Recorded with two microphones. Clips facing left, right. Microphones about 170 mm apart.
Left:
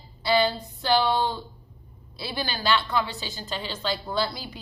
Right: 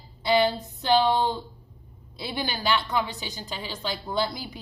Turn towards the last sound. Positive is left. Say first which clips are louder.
# even
turn(degrees=-15)  # may be behind; listen again after turning